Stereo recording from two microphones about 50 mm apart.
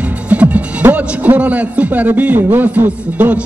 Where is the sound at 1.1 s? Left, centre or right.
Right.